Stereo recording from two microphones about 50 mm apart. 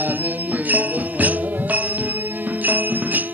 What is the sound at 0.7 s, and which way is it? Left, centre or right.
Jingle bell, right.